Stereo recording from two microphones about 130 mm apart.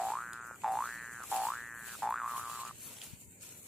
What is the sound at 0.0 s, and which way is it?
Boing, centre (ahead or behind).